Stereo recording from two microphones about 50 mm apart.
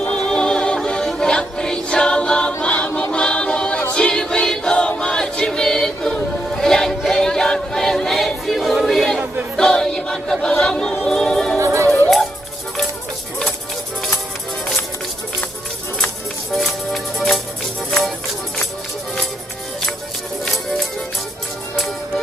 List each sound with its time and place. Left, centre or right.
0.3 s music: centre
2.6 s choir: left
3.1 s a capella: centre
3.9 s music: centre
8.7 s a sound: centre
9.6 s choir: centre
10.6 s a capella: centre
11.0 s music: centre
11.6 s music: right
12.0 s music: centre
16.5 s music: centre
21.8 s music: centre